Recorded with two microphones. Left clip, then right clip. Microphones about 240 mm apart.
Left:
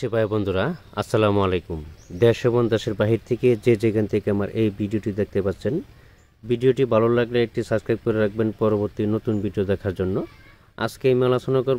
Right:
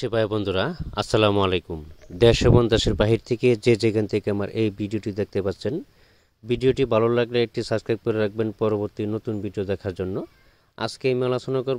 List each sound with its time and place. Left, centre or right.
0.0 s speech: right